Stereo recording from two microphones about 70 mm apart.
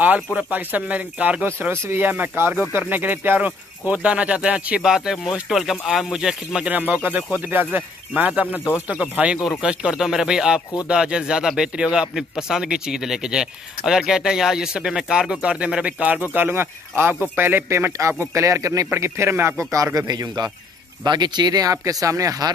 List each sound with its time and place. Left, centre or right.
0.5 s speech: right
1.4 s speech: right; by 6.7 s centre
6.7 s speech: right
16.3 s speech: right
17.6 s speech: right
18.9 s speech: right
21.0 s speech: right